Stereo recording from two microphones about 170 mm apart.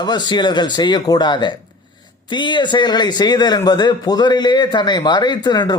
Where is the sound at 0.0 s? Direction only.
25° left (ahead or behind).